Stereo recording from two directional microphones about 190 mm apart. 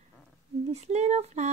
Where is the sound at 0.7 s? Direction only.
35° right (ahead or behind).